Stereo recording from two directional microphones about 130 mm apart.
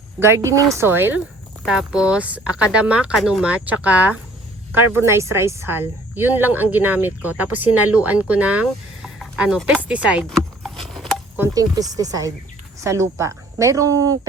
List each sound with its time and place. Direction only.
0.2 s a woman's voice: 20° right (ahead or behind)
1.6 s speech: 5° right (ahead or behind)
10.6 s a sound: centre (ahead or behind)
11.5 s a woman's voice: 30° right (ahead or behind)